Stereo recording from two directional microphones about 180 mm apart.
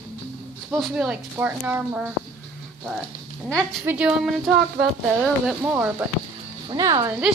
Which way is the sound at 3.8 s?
5° right (ahead or behind).